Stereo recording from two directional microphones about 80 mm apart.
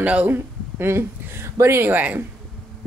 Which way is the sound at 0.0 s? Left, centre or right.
Centre.